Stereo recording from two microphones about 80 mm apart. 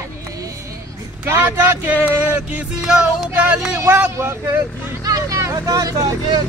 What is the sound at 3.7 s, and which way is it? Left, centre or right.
Speech, right.